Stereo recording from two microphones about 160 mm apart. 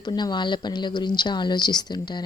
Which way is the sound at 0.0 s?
25° left (ahead or behind).